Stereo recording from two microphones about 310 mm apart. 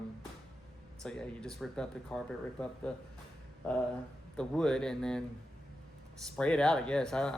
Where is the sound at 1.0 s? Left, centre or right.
Centre.